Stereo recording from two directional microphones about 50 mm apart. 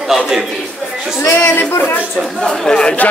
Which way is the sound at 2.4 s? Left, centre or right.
Centre.